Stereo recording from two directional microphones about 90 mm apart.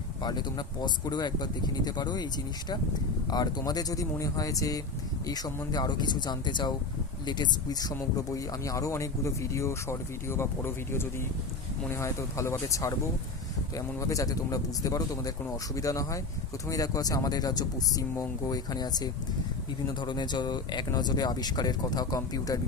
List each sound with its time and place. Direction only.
0.2 s speech: 50° left (ahead or behind)
3.2 s speech: 50° left (ahead or behind)